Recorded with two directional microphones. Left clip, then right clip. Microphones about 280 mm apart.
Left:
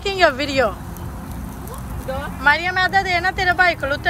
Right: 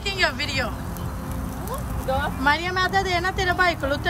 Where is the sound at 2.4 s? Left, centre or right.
Centre.